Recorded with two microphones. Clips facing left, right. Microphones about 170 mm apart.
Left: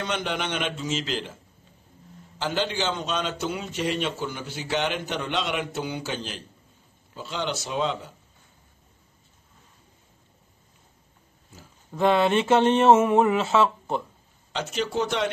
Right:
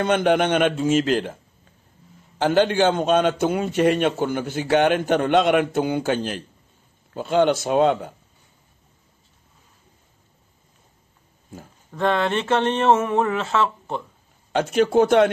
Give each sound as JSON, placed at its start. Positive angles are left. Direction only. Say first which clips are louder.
{"t": 0.0, "sound": "a man's voice", "louder": "right 10 dB", "side_deg": -55}
{"t": 11.9, "sound": "a sound", "louder": "left 1 dB", "side_deg": 10}
{"t": 14.5, "sound": "a man's voice", "louder": "right 10 dB", "side_deg": -55}